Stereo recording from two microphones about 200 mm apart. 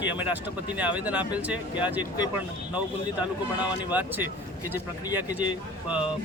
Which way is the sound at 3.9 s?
10° right (ahead or behind).